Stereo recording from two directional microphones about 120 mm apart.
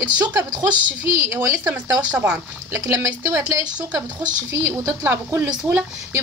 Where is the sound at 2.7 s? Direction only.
25° right (ahead or behind).